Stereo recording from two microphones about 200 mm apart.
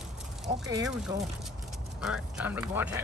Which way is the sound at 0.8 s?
5° right (ahead or behind).